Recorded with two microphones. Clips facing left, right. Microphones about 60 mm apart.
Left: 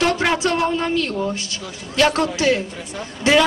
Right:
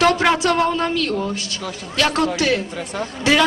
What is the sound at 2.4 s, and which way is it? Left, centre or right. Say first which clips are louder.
Speech: left 1 dB; left.